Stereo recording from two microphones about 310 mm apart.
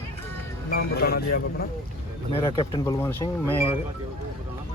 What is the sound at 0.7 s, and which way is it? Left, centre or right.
Speech, left.